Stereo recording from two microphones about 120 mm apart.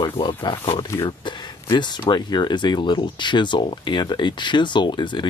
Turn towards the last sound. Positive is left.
turn(degrees=40)  # may be behind; listen again after turning